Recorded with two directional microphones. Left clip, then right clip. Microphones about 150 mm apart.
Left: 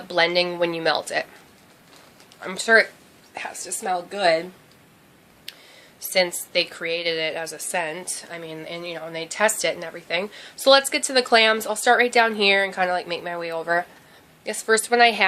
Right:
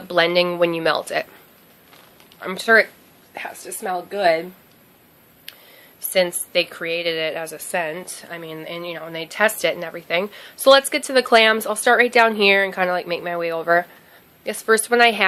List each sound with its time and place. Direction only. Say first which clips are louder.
0.1 s a woman's voice: right 3 dB; 35° right (ahead or behind)
2.4 s a woman's voice: right 2 dB; 40° right (ahead or behind)
5.5 s a sound: left 1 dB; 40° right (ahead or behind)
6.1 s a woman's voice: right 2 dB; 35° right (ahead or behind)